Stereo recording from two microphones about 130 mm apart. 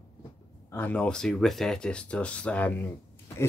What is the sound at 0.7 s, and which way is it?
Speech, 15° left (ahead or behind).